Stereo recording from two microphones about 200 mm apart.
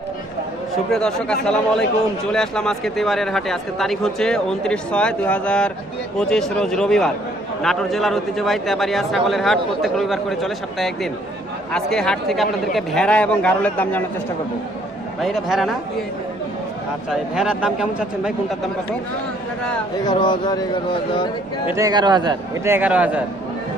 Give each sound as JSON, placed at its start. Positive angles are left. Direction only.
{"t": 0.9, "sound": "a man's voice", "side_deg": 5}
{"t": 15.2, "sound": "a man's voice", "side_deg": 0}
{"t": 17.1, "sound": "a man's voice", "side_deg": -5}
{"t": 20.1, "sound": "speech", "side_deg": 25}
{"t": 21.8, "sound": "a man's voice", "side_deg": -20}